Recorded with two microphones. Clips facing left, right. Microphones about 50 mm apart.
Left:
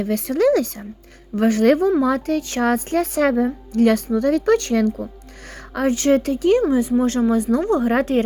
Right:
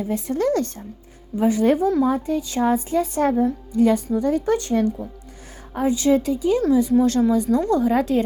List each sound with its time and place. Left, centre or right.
0.0 s speech: left
1.4 s speech: left
5.7 s a woman's voice: left
6.6 s speech: left